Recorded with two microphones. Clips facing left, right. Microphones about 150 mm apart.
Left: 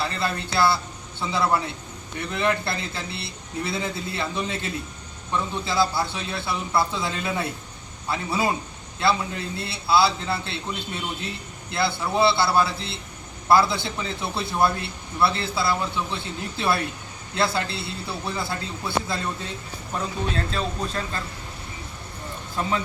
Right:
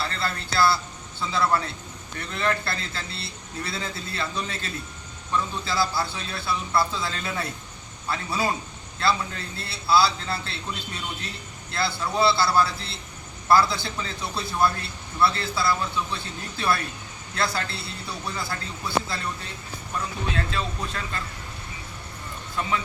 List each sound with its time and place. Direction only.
0.0 s a man's voice: 20° left (ahead or behind)
20.3 s speech: 35° left (ahead or behind)